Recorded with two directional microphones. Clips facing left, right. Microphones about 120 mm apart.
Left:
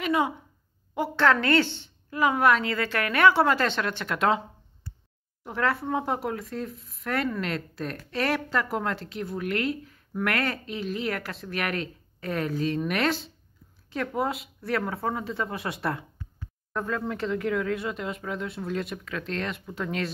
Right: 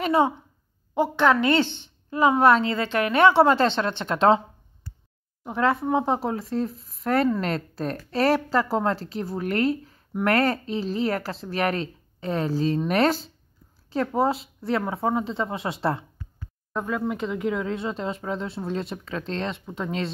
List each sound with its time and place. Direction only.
0.0 s a woman's voice: 35° right (ahead or behind)
0.9 s a woman's voice: 20° right (ahead or behind)
5.4 s a woman's voice: 20° right (ahead or behind)
16.7 s a woman's voice: 15° right (ahead or behind)